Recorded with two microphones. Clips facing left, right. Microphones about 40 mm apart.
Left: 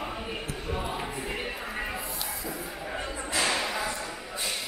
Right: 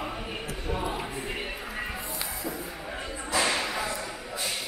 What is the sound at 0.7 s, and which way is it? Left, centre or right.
Music, centre.